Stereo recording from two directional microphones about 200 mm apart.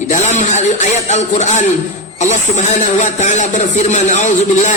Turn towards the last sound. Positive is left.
turn(degrees=35)  # may be behind; listen again after turning